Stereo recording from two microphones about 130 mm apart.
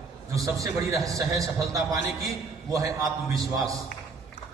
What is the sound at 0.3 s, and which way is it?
A man's voice, 25° right (ahead or behind).